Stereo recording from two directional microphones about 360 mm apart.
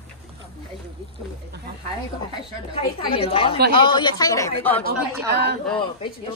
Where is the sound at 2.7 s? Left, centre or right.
Centre.